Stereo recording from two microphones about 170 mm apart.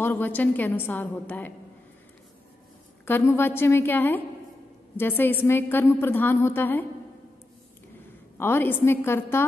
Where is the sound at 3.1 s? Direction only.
15° left (ahead or behind).